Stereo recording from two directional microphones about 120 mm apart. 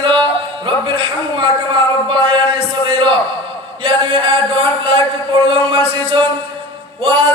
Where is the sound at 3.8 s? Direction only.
45° right (ahead or behind).